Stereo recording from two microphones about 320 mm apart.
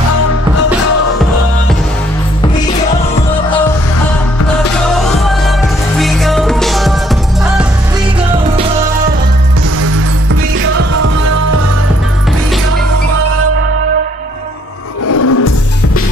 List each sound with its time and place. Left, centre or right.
2.4 s music: centre
4.9 s music: centre
15.0 s music: left